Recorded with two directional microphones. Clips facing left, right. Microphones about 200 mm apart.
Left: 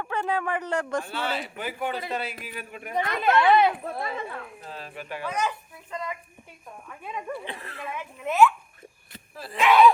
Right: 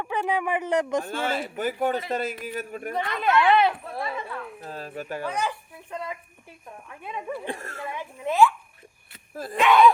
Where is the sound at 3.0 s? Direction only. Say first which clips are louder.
Left 1 dB; 40° left (ahead or behind).